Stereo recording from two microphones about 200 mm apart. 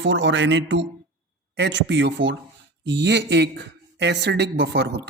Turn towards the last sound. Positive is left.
turn(degrees=-55)  # may be behind; listen again after turning